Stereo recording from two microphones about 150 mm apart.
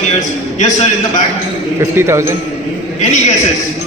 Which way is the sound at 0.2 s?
55° left (ahead or behind).